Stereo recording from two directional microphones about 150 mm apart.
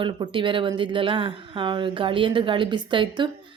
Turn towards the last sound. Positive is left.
turn(degrees=-35)  # may be behind; listen again after turning